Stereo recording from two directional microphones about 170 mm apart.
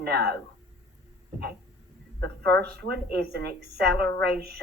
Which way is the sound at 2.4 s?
75° right (ahead or behind).